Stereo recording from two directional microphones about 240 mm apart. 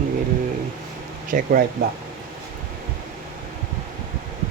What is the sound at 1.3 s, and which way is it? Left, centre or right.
Speech, right.